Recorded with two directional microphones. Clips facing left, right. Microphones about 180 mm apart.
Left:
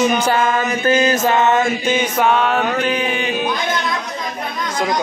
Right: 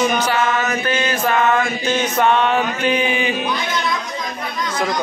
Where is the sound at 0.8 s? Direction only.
35° left (ahead or behind).